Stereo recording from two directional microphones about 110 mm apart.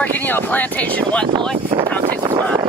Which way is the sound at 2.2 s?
35° right (ahead or behind).